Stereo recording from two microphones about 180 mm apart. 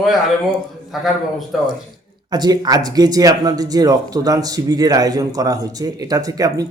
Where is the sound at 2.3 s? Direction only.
25° right (ahead or behind).